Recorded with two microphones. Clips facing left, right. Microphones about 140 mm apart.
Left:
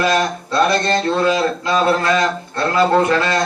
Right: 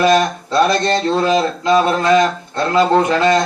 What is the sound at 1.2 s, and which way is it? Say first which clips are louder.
Speech: right 1 dB; 20° right (ahead or behind).